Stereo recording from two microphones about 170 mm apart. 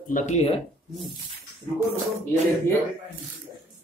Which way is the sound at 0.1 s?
40° left (ahead or behind).